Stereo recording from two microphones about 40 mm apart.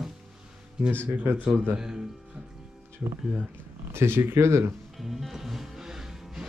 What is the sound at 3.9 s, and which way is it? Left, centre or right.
Speech, right.